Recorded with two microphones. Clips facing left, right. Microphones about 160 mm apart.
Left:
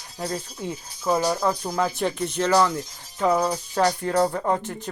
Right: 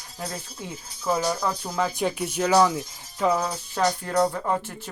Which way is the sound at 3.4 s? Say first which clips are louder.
Left 3 dB; 15° left (ahead or behind).